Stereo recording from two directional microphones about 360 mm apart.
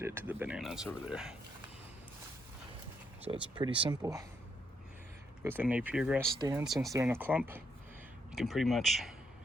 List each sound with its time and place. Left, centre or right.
0.0 s speech: centre
3.3 s speech: centre
5.4 s speech: centre